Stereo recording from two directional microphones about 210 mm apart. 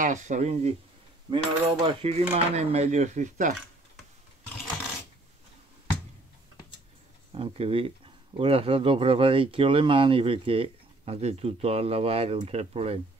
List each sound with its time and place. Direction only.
0.0 s speech: 35° right (ahead or behind)
7.3 s speech: 25° right (ahead or behind)